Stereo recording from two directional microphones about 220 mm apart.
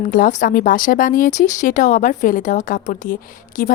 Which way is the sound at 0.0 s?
40° left (ahead or behind).